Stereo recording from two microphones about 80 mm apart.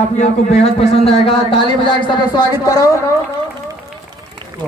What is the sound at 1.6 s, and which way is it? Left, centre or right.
Speech, left.